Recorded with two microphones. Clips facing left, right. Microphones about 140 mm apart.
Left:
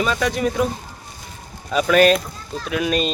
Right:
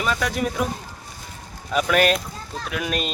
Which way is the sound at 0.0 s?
5° right (ahead or behind).